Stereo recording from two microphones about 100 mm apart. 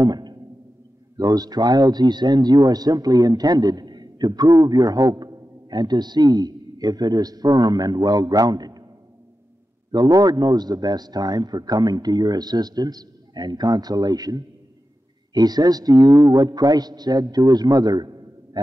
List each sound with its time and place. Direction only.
0.0 s music: 45° right (ahead or behind)
1.1 s a man's voice: 40° right (ahead or behind)
9.8 s a man's voice: 40° right (ahead or behind)